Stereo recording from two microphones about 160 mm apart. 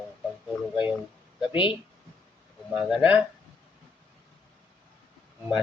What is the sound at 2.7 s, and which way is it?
Speech, centre (ahead or behind).